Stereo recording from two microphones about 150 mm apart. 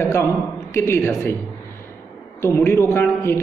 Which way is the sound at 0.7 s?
15° left (ahead or behind).